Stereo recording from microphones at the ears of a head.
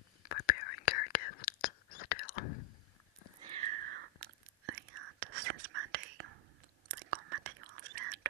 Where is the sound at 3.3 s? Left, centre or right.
Right.